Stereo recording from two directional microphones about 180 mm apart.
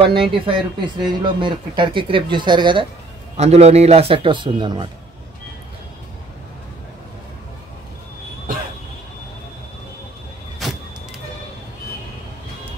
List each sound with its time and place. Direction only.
0.0 s a man's voice: 30° right (ahead or behind)
10.6 s vehicle: centre (ahead or behind)